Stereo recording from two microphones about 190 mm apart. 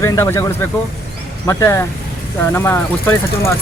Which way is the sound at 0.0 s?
15° left (ahead or behind).